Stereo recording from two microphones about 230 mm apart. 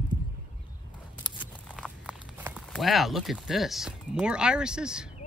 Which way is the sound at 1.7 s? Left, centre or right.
Centre.